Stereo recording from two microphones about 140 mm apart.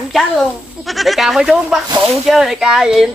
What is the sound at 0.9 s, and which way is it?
Speech, centre (ahead or behind).